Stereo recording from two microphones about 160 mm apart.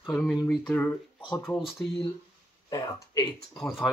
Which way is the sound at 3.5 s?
Centre (ahead or behind).